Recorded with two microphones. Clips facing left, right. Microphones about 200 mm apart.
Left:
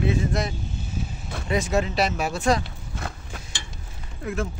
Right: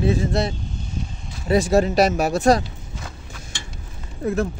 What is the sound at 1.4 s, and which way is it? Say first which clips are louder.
Speech: right 7 dB; 35° right (ahead or behind).